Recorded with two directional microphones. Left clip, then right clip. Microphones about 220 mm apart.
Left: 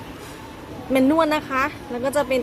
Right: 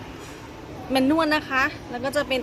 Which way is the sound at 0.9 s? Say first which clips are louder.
Left 2 dB; 20° left (ahead or behind).